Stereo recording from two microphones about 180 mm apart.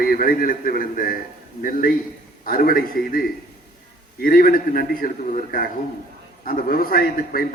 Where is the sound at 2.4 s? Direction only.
55° left (ahead or behind).